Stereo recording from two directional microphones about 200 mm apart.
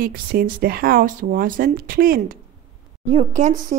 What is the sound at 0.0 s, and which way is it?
Speech, 45° right (ahead or behind).